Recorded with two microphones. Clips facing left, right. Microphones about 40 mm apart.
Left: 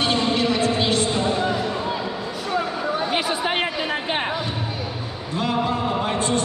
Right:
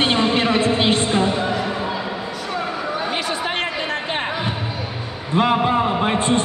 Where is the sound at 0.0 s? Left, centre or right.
Right.